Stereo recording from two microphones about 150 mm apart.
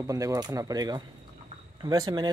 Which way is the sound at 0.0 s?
20° right (ahead or behind).